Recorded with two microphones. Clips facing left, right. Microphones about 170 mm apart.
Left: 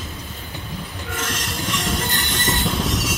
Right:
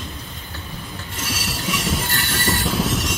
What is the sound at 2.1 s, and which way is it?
Train, 20° left (ahead or behind).